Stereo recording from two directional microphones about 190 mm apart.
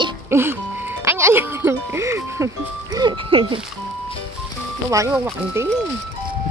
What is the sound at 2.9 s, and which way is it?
Speech, 25° right (ahead or behind).